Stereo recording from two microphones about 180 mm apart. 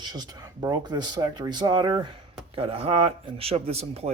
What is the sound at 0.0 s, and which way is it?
Speech, 25° right (ahead or behind).